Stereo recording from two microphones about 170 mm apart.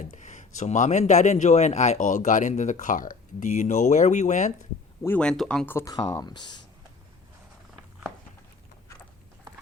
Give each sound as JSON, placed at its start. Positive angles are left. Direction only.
{"t": 0.0, "sound": "speech", "side_deg": 45}
{"t": 5.0, "sound": "speech", "side_deg": 10}